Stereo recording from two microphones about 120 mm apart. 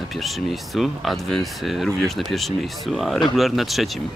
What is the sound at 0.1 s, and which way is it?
Speech, centre (ahead or behind).